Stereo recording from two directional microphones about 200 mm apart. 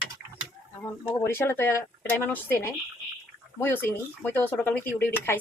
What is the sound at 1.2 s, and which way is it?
Speech, 10° left (ahead or behind).